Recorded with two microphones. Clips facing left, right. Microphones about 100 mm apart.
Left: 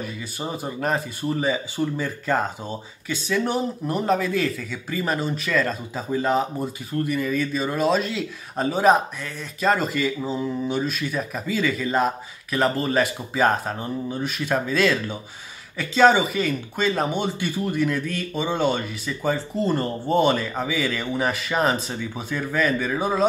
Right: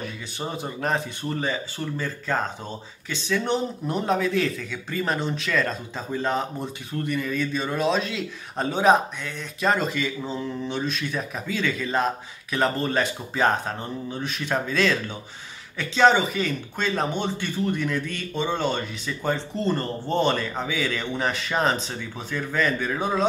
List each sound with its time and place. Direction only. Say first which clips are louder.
0.0 s speech: left 1 dB; 5° left (ahead or behind)